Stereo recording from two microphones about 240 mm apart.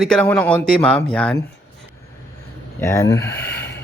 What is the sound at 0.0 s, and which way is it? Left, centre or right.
Speech, centre.